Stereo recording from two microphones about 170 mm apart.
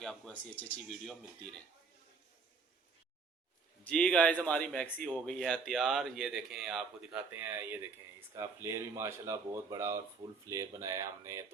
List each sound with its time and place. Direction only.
0.0 s speech: 5° left (ahead or behind)
3.8 s speech: 5° left (ahead or behind); by 11.4 s 15° right (ahead or behind)